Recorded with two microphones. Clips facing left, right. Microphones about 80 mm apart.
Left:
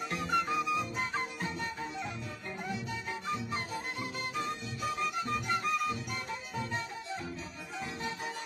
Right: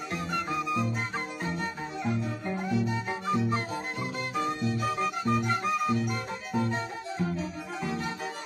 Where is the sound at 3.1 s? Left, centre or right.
Right.